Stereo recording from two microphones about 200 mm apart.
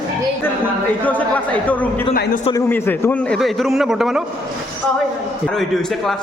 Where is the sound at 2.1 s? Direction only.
50° left (ahead or behind).